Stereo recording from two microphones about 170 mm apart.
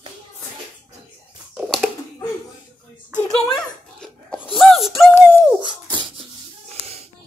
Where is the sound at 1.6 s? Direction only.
Centre (ahead or behind).